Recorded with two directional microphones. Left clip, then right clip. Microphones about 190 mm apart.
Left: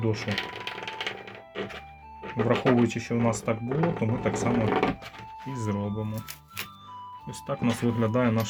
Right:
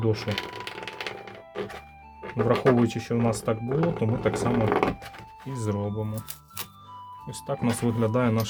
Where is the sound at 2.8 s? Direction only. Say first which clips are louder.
Even; 30° right (ahead or behind).